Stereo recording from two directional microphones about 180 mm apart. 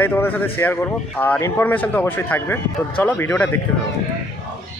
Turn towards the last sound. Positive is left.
turn(degrees=10)  # may be behind; listen again after turning